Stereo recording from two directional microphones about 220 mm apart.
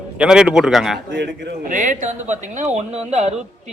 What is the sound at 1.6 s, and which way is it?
Speech, 35° right (ahead or behind).